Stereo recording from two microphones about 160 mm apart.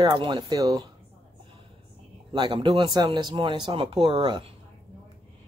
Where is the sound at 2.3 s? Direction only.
30° right (ahead or behind).